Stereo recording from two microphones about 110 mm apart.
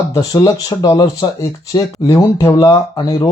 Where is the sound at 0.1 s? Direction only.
30° left (ahead or behind).